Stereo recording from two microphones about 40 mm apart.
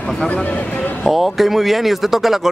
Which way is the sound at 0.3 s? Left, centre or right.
Left.